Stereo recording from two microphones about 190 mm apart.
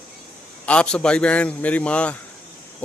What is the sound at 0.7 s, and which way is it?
A man's voice, 5° left (ahead or behind).